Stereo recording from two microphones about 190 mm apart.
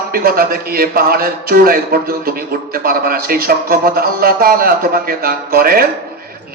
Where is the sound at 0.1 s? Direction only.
50° right (ahead or behind).